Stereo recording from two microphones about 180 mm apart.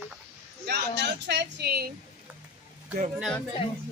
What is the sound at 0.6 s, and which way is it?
A woman's voice, 65° right (ahead or behind).